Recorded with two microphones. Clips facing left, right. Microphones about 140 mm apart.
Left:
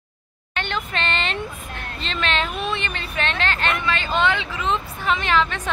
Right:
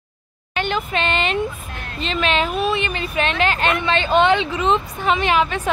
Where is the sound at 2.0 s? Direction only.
10° right (ahead or behind).